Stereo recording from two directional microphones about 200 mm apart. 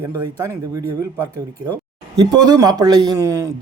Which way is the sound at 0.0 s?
15° right (ahead or behind).